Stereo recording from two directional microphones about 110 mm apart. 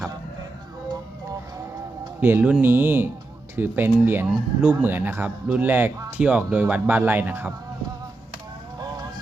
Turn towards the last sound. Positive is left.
turn(degrees=-15)  # may be behind; listen again after turning